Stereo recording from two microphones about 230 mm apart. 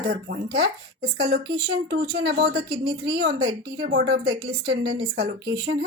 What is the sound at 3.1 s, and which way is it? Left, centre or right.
Speech, right.